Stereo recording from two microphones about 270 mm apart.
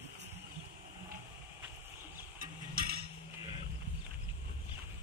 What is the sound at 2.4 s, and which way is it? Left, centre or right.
Music, right.